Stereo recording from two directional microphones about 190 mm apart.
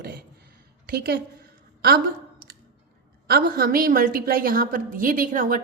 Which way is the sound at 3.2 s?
55° right (ahead or behind).